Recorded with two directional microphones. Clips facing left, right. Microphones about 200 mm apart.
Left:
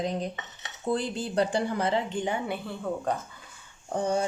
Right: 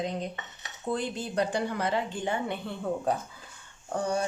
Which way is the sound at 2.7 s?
5° right (ahead or behind).